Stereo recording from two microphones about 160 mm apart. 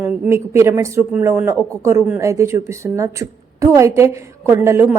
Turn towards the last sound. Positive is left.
turn(degrees=-15)  # may be behind; listen again after turning